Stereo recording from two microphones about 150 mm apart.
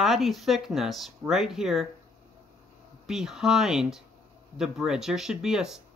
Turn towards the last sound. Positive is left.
turn(degrees=-5)  # may be behind; listen again after turning